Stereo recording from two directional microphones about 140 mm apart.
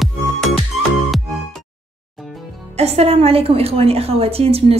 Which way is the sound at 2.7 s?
50° right (ahead or behind).